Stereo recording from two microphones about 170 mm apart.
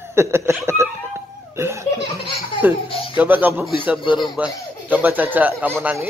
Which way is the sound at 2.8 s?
30° left (ahead or behind).